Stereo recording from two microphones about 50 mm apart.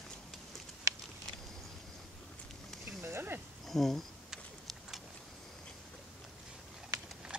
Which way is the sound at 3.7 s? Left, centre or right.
Centre.